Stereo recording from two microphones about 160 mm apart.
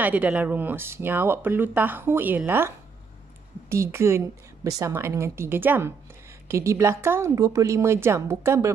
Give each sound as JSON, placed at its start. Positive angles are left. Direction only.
{"t": 0.0, "sound": "speech", "side_deg": -10}
{"t": 3.7, "sound": "speech", "side_deg": -15}